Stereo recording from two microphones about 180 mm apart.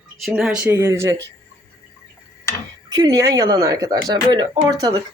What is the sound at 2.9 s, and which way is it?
Speech, 20° right (ahead or behind).